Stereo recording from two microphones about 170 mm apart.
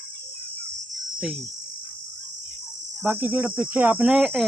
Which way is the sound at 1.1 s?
Centre (ahead or behind).